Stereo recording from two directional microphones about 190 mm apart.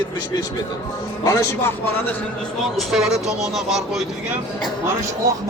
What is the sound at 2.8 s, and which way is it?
Speech, centre (ahead or behind).